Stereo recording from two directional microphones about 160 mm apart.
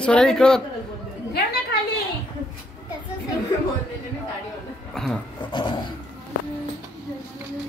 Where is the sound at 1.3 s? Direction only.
85° left.